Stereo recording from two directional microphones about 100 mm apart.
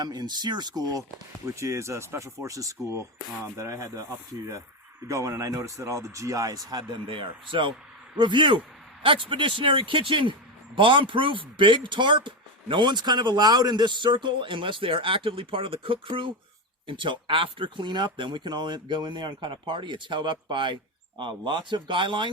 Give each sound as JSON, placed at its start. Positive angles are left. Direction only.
{"t": 0.0, "sound": "speech", "side_deg": -45}
{"t": 1.5, "sound": "speech", "side_deg": -30}
{"t": 5.0, "sound": "speech", "side_deg": -30}
{"t": 6.7, "sound": "speech", "side_deg": -50}